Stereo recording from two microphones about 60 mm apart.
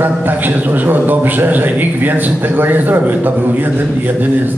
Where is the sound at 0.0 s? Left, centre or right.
Right.